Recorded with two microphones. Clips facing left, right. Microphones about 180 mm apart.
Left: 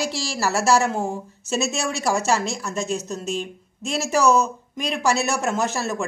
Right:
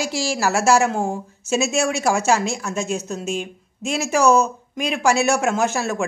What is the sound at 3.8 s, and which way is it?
A woman's voice, centre (ahead or behind).